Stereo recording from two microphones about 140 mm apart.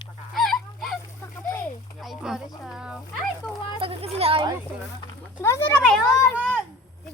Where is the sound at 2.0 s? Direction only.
Centre (ahead or behind).